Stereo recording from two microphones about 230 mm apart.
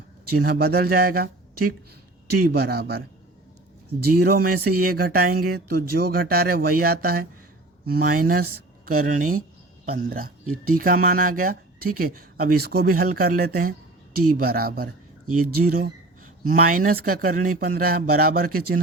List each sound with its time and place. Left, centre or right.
0.3 s speech: right
4.2 s speech: right
15.3 s speech: right
16.5 s speech: right